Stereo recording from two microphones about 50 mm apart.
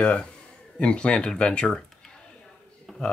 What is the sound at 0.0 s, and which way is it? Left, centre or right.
Speech, left.